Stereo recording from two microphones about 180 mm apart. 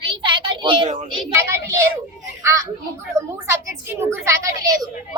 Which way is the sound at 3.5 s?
15° right (ahead or behind).